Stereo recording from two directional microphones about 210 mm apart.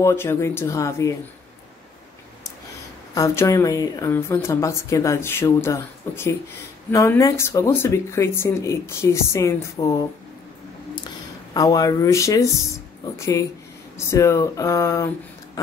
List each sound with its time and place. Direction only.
0.0 s a woman's voice: 10° left (ahead or behind)
3.2 s a woman's voice: 15° left (ahead or behind)
11.5 s a woman's voice: 15° left (ahead or behind)